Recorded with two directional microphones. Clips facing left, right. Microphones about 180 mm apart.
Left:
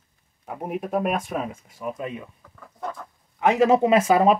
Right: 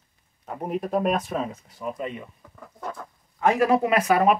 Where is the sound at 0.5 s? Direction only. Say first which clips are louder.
Right 1 dB; 5° left (ahead or behind).